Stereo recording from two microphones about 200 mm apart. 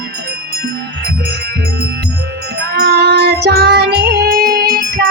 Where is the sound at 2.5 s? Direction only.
55° right (ahead or behind).